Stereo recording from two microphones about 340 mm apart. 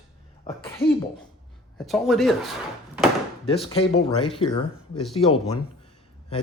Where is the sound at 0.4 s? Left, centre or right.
Centre.